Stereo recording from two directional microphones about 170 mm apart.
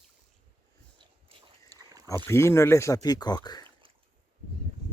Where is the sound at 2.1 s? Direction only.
15° left (ahead or behind).